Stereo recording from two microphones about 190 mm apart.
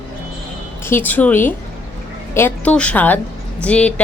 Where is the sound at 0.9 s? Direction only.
10° left (ahead or behind).